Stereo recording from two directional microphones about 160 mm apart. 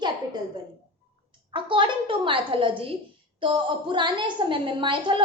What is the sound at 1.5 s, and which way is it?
A woman's voice, 30° right (ahead or behind).